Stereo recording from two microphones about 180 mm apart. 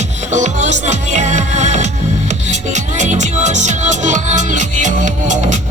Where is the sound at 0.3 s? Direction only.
40° right (ahead or behind).